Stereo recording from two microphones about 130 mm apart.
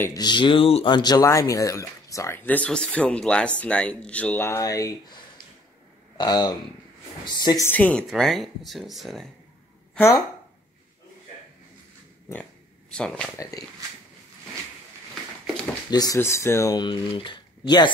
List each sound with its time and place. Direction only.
0.0 s speech: 30° left (ahead or behind); by 0.9 s 45° left (ahead or behind)
0.9 s speech: 30° left (ahead or behind)
6.1 s speech: 30° left (ahead or behind)
7.6 s speech: 15° left (ahead or behind)
8.1 s speech: centre (ahead or behind)
12.9 s speech: 5° left (ahead or behind)
13.4 s speech: 25° left (ahead or behind)
15.9 s speech: 30° left (ahead or behind)